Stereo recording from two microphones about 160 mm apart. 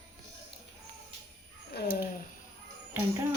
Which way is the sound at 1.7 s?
90° left.